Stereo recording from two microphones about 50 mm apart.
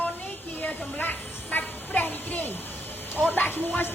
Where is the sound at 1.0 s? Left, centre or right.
Left.